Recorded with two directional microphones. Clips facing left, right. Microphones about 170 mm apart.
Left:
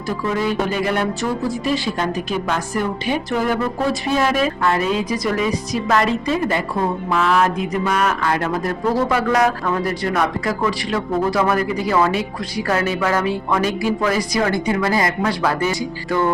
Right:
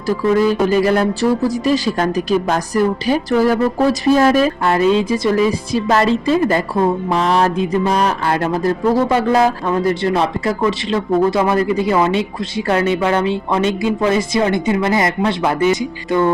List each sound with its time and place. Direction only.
0.3 s speech: 40° right (ahead or behind); by 16.3 s 20° right (ahead or behind)